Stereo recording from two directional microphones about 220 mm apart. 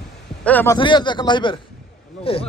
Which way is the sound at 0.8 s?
20° left (ahead or behind).